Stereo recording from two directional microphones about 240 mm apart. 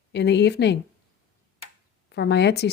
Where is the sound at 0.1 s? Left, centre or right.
Left.